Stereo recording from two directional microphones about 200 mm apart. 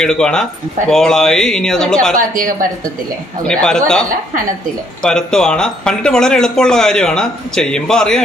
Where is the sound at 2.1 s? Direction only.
45° right (ahead or behind).